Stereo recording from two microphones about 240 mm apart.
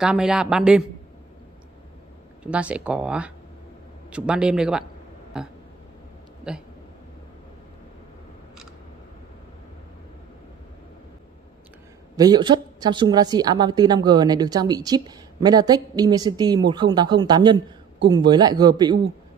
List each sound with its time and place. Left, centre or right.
0.0 s speech: centre
2.4 s speech: centre
12.2 s a woman's voice: centre